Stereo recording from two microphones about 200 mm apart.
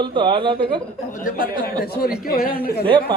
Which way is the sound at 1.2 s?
45° left (ahead or behind).